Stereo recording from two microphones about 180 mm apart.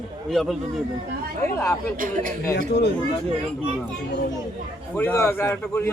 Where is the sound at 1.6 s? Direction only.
15° left (ahead or behind).